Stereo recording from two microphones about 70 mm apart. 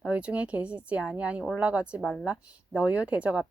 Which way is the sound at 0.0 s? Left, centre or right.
Centre.